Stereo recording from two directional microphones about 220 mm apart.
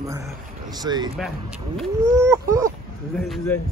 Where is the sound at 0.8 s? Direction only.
20° right (ahead or behind).